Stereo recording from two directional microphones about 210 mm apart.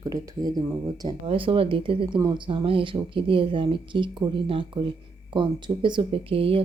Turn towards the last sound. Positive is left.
turn(degrees=-25)  # may be behind; listen again after turning